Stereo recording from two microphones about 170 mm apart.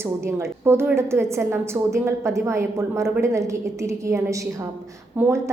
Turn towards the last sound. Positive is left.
turn(degrees=-15)  # may be behind; listen again after turning